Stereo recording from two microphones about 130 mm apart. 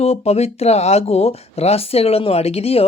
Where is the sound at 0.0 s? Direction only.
55° left (ahead or behind).